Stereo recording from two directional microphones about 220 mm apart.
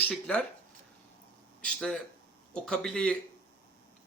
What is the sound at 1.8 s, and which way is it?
A man's voice, centre (ahead or behind).